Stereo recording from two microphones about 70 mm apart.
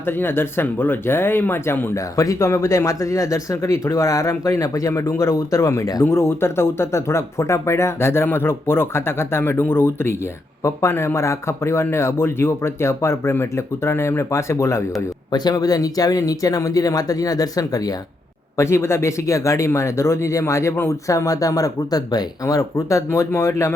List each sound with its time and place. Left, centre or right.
0.0 s speech: left
2.0 s speech: left
15.3 s speech: left
18.5 s speech: left
21.1 s speech: left